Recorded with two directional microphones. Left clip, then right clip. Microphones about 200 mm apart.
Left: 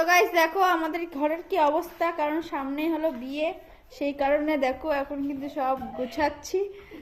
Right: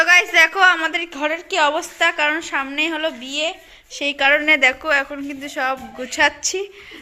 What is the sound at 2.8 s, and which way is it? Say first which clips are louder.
Speech: right 3 dB; 50° right (ahead or behind).